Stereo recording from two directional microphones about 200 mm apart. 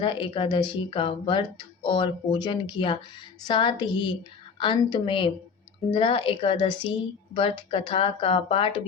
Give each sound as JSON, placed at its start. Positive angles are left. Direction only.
{"t": 0.0, "sound": "speech", "side_deg": 25}